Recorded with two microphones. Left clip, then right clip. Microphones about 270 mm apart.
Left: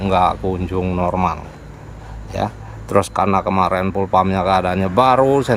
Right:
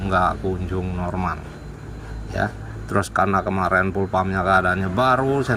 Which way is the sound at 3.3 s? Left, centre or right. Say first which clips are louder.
Left 3 dB; left.